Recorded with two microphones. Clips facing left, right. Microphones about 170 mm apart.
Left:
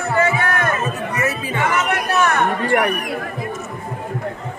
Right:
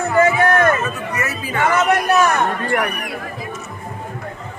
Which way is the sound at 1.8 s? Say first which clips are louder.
Right 3 dB; 40° right (ahead or behind).